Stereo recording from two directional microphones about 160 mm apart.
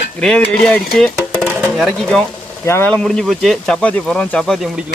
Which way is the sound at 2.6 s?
15° left (ahead or behind).